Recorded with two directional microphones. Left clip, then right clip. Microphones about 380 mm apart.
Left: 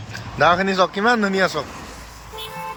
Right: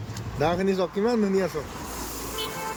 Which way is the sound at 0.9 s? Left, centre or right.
Left.